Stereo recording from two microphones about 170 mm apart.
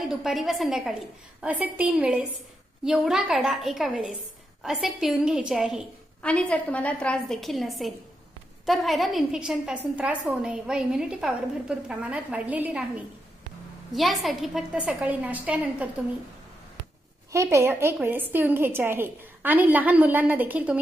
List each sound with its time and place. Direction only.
0.1 s a woman's voice: centre (ahead or behind)
6.2 s a woman's voice: 10° left (ahead or behind); by 15.9 s 10° right (ahead or behind)
17.3 s a woman's voice: 15° right (ahead or behind)